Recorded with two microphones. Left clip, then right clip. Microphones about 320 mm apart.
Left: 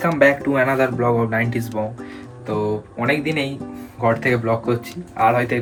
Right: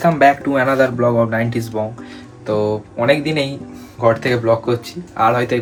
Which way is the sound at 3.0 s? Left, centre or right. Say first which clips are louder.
Right 5 dB; centre.